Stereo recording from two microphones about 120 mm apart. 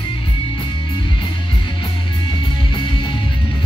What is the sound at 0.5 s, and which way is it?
Music, 40° left (ahead or behind).